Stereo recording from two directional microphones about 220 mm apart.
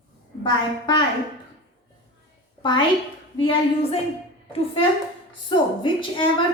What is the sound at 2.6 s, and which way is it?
A woman's voice, 20° left (ahead or behind).